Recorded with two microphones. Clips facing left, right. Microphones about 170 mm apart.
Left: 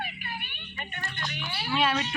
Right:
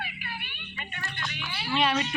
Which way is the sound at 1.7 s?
Centre (ahead or behind).